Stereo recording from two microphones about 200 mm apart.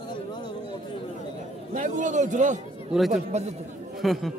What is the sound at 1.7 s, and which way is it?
A man's voice, 40° right (ahead or behind).